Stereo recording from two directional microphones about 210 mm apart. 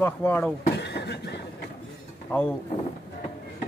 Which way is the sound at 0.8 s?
55° left (ahead or behind).